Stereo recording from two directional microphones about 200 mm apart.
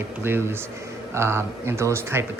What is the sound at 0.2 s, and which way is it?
Speech, 10° right (ahead or behind).